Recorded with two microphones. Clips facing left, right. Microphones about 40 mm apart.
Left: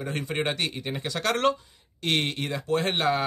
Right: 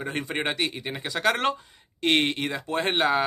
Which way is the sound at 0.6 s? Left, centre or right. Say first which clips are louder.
Right 1 dB; centre.